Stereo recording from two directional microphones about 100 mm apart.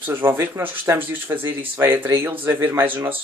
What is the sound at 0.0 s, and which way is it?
Speech, 20° right (ahead or behind).